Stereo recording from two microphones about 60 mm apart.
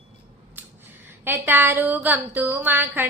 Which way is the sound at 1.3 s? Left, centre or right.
Right.